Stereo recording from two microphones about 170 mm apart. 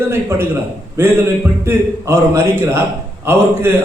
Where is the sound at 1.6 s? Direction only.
15° right (ahead or behind).